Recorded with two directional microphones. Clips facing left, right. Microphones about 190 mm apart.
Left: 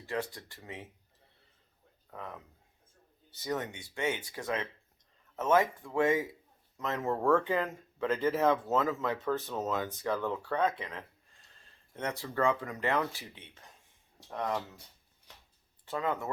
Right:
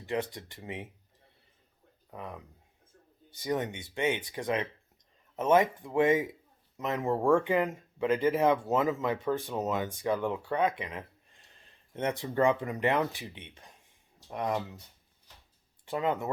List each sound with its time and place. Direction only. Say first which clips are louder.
0.0 s speech: right 3 dB; 20° right (ahead or behind)
2.0 s speech: right 2 dB; 15° right (ahead or behind)
3.3 s speech: right 4 dB; 15° right (ahead or behind)
15.9 s speech: right 3 dB; 20° right (ahead or behind)